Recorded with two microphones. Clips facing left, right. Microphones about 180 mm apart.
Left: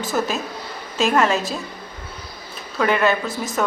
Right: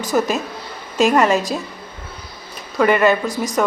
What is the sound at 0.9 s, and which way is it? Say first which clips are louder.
Speech: right 4 dB; centre (ahead or behind).